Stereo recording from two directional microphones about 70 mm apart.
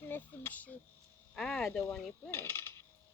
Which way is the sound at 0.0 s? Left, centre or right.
Left.